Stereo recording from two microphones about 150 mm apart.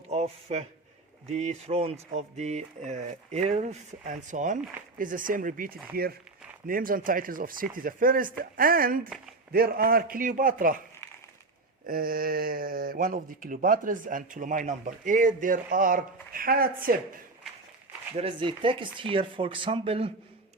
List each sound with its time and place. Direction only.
0.1 s a man's voice: 45° right (ahead or behind); by 6.1 s 80° right
6.7 s speech: 70° right (ahead or behind)
9.5 s speech: 90° right; by 10.8 s 65° right (ahead or behind)
11.9 s speech: 75° right (ahead or behind)
18.2 s speech: 35° right (ahead or behind)